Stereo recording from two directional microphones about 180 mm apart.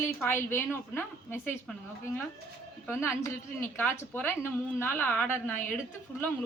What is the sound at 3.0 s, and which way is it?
A woman's voice, 15° left (ahead or behind).